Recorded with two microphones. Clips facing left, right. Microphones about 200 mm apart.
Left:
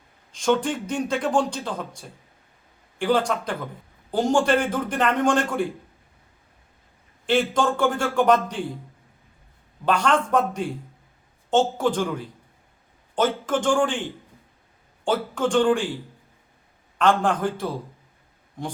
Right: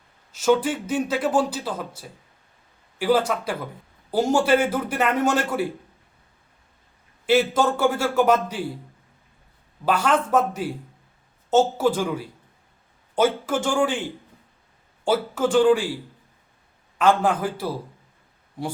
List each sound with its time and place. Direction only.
0.3 s a man's voice: 5° right (ahead or behind)
7.3 s a man's voice: 5° right (ahead or behind)
9.8 s a man's voice: 5° right (ahead or behind)
17.0 s a man's voice: 5° right (ahead or behind)